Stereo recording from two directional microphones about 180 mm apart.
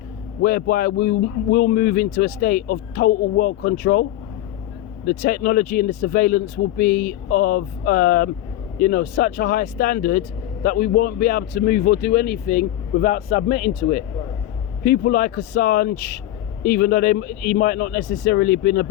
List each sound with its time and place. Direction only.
0.4 s speech: 55° left (ahead or behind)
5.0 s speech: 55° left (ahead or behind)